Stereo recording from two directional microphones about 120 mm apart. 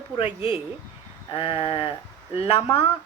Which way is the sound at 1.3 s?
50° left (ahead or behind).